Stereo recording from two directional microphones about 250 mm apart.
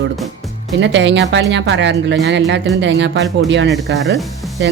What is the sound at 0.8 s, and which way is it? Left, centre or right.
A woman's voice, right.